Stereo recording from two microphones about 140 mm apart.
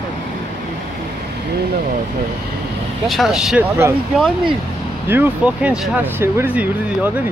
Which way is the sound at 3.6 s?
15° right (ahead or behind).